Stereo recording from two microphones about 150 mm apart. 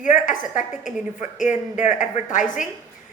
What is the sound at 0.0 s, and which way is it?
A woman's voice, 60° left (ahead or behind).